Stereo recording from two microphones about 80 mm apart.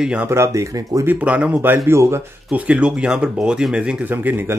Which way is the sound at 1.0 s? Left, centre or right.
Centre.